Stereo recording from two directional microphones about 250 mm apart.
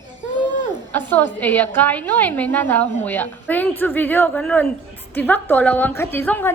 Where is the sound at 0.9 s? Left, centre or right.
Centre.